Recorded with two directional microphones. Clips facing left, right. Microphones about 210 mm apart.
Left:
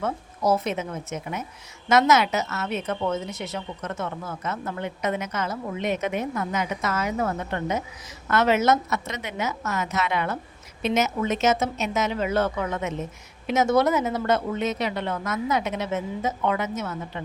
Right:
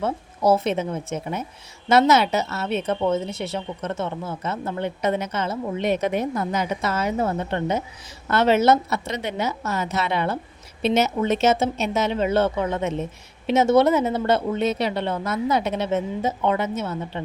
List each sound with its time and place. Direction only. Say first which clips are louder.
0.0 s a woman's voice: right 4 dB; 30° right (ahead or behind)